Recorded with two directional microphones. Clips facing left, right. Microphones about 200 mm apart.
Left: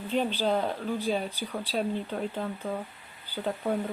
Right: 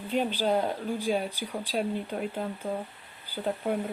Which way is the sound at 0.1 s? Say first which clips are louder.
Even; 10° right (ahead or behind).